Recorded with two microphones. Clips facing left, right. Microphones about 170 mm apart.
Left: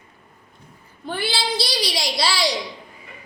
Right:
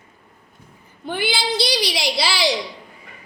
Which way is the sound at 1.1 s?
Centre (ahead or behind).